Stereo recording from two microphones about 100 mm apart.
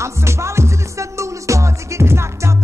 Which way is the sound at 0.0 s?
30° right (ahead or behind).